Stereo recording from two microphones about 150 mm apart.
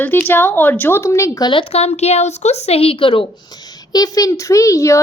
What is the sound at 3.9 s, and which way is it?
A child's voice, 25° left (ahead or behind).